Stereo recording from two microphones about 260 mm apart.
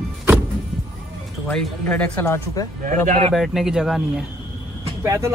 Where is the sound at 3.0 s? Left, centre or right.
Right.